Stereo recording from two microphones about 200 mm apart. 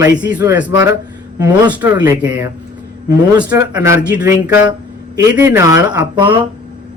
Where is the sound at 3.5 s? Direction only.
15° right (ahead or behind).